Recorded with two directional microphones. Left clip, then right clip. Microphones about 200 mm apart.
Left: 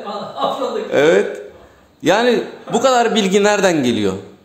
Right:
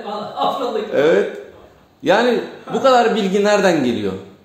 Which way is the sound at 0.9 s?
25° left (ahead or behind).